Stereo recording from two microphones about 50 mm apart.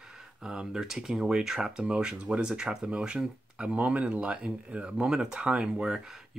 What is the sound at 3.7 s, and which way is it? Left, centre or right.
Speech, right.